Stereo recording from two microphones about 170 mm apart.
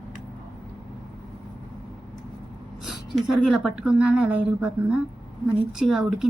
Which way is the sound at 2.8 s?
Centre (ahead or behind).